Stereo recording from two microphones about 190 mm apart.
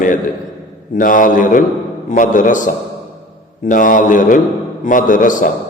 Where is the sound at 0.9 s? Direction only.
45° left (ahead or behind).